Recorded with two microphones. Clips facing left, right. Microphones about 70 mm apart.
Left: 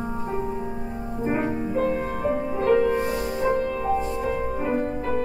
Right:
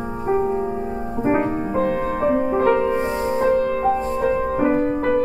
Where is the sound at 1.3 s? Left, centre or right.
Right.